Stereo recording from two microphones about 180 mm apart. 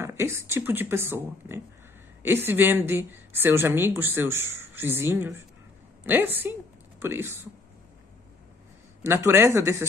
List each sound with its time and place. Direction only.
0.0 s a woman's voice: 15° right (ahead or behind)
9.0 s a woman's voice: 15° right (ahead or behind)